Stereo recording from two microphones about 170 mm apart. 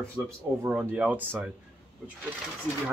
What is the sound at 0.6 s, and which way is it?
Speech, 5° right (ahead or behind).